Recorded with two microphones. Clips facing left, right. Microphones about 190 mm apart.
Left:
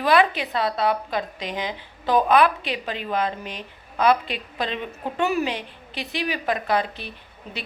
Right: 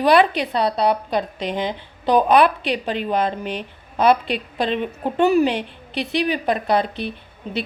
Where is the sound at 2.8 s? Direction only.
30° right (ahead or behind).